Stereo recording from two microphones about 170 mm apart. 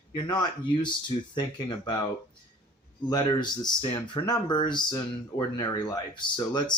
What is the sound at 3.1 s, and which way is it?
Speech, 25° left (ahead or behind).